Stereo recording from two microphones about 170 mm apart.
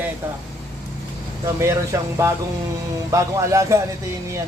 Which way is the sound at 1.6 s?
15° right (ahead or behind).